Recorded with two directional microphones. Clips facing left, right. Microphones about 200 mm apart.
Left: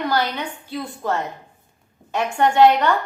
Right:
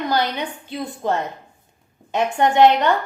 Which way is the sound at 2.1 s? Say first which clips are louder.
Right 1 dB; 20° right (ahead or behind).